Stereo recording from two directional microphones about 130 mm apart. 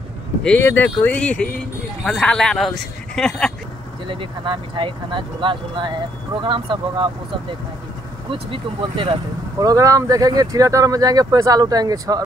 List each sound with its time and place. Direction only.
0.4 s speech: 5° left (ahead or behind)
4.1 s speech: 40° right (ahead or behind)
8.3 s speech: 40° right (ahead or behind)
9.6 s speech: 30° right (ahead or behind)